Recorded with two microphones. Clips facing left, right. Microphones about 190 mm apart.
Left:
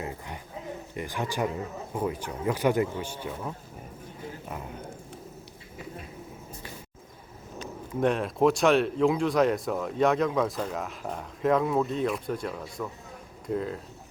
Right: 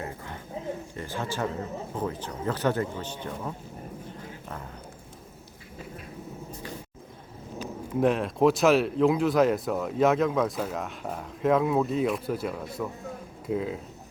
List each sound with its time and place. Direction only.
0.9 s speech: 15° left (ahead or behind)
7.6 s speech: 5° right (ahead or behind)